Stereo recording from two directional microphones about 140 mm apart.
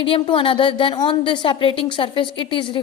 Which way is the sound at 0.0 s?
40° left (ahead or behind).